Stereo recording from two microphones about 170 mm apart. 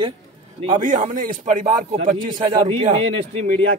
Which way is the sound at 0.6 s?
30° right (ahead or behind).